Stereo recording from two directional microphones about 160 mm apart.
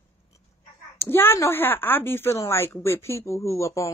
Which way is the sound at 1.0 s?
15° left (ahead or behind).